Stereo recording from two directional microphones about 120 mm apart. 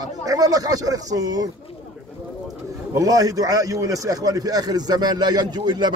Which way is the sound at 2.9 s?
30° right (ahead or behind).